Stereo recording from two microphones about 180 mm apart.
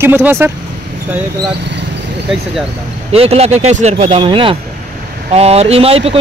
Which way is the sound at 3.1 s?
35° right (ahead or behind).